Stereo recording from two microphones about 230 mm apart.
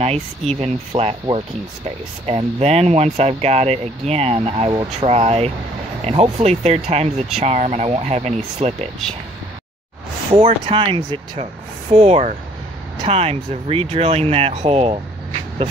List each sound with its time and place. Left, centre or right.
0.0 s speech: right
10.3 s speech: right